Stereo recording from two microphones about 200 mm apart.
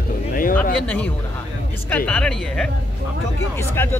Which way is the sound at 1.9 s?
5° left (ahead or behind).